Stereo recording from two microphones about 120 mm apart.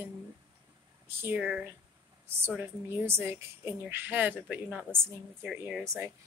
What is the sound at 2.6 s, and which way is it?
A woman's voice, 20° right (ahead or behind).